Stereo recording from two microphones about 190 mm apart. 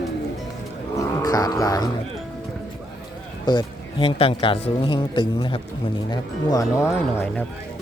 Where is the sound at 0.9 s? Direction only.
20° left (ahead or behind).